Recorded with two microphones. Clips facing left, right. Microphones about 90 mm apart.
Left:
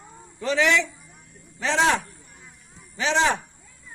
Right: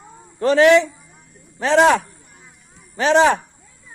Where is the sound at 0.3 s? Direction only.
50° right (ahead or behind).